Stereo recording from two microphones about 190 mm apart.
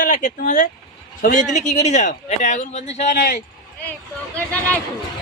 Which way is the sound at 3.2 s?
50° left (ahead or behind).